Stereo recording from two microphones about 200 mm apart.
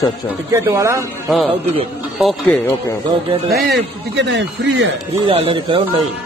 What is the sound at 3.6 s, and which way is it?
Speech, 60° right (ahead or behind).